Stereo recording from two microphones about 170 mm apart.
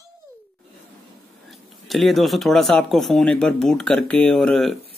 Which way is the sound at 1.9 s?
Centre (ahead or behind).